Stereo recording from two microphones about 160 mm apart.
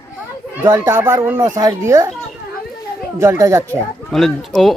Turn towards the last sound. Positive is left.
turn(degrees=0)  # may be behind; listen again after turning